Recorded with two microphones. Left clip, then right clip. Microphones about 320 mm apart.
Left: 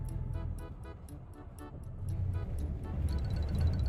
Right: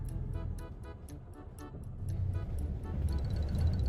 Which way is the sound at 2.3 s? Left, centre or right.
Centre.